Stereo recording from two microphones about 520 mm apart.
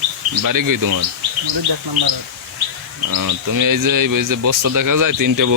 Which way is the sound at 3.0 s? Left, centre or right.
Right.